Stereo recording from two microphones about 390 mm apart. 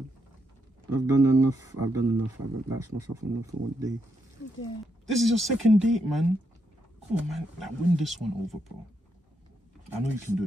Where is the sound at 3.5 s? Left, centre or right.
Centre.